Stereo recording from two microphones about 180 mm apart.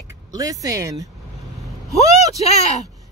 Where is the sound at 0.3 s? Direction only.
20° right (ahead or behind).